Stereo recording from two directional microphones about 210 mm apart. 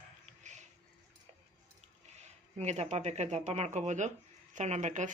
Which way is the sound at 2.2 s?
30° right (ahead or behind).